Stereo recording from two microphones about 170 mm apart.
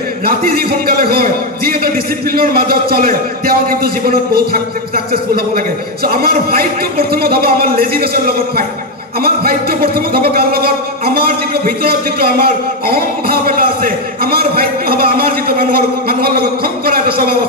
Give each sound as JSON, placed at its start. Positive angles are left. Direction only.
{"t": 0.2, "sound": "a man's voice", "side_deg": -60}